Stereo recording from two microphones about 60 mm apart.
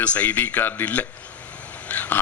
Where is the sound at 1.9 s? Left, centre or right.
Left.